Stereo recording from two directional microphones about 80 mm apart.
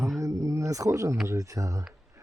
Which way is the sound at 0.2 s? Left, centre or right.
Right.